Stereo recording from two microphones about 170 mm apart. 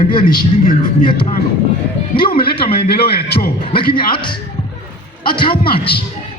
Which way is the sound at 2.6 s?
35° left (ahead or behind).